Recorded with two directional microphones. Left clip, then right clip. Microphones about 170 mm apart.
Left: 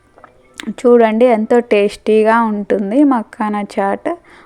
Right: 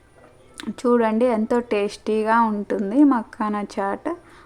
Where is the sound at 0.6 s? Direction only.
20° left (ahead or behind).